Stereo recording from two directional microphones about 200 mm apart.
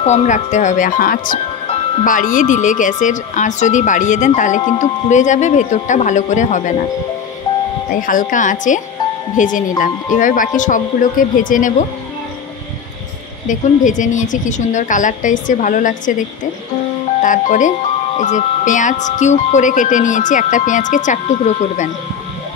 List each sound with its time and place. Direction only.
0.0 s speech: 35° left (ahead or behind)
7.9 s speech: 40° left (ahead or behind)
13.5 s speech: 40° left (ahead or behind)
17.2 s speech: 40° left (ahead or behind)